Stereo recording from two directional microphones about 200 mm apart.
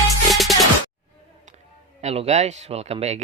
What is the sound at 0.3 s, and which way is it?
Music, centre (ahead or behind).